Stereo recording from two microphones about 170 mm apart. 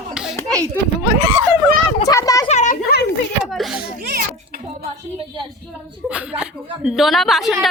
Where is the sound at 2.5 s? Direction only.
45° left (ahead or behind).